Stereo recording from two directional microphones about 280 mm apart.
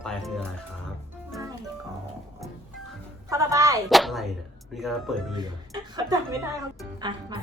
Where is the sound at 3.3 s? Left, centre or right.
Centre.